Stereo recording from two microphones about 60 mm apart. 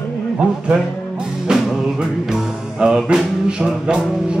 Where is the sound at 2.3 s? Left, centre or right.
Centre.